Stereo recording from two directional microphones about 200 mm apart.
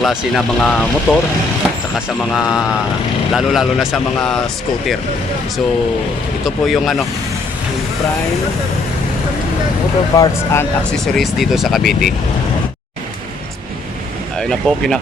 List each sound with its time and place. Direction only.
0.0 s speech: centre (ahead or behind)
2.3 s speech: centre (ahead or behind)
6.4 s speech: centre (ahead or behind)
10.2 s speech: 15° left (ahead or behind)
10.9 s speech: centre (ahead or behind)
14.3 s speech: centre (ahead or behind)